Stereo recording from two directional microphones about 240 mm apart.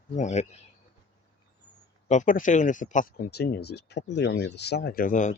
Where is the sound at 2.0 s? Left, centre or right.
Left.